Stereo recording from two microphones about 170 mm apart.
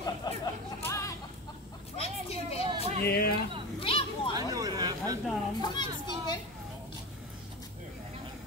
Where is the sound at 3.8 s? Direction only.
35° left (ahead or behind).